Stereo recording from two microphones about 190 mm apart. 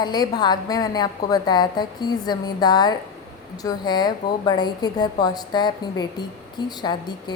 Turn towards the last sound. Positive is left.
turn(degrees=20)  # may be behind; listen again after turning